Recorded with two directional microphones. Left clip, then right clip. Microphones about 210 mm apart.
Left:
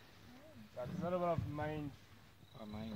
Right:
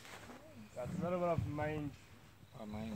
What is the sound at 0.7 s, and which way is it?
Speech, 35° right (ahead or behind).